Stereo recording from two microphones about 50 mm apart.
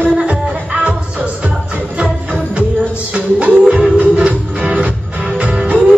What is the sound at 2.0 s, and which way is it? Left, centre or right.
Music, right.